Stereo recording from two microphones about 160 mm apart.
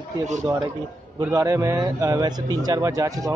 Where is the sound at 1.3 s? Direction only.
20° right (ahead or behind).